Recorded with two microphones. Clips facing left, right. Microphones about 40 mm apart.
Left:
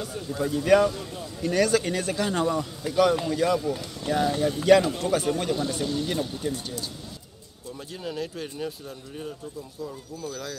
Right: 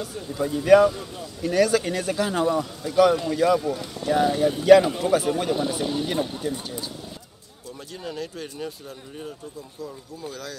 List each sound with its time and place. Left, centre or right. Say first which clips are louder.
0.0 s speech: right 1 dB; centre; by 6.4 s right
8.0 s speech: left 1 dB; centre